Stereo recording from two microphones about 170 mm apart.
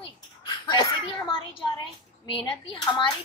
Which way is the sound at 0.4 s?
25° left (ahead or behind).